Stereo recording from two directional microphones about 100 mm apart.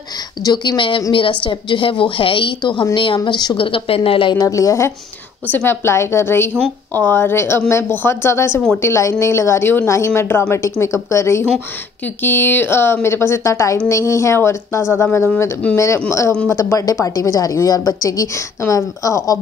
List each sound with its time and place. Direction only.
0.4 s a woman's voice: 45° left (ahead or behind)
3.3 s speech: 45° left (ahead or behind)
3.5 s a woman's voice: 65° left (ahead or behind)
4.4 s a woman's voice: 35° left (ahead or behind)